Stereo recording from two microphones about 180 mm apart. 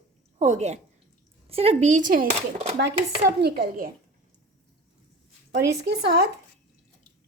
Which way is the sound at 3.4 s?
55° right (ahead or behind).